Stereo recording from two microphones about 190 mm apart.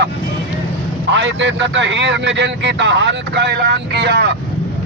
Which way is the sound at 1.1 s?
70° right (ahead or behind).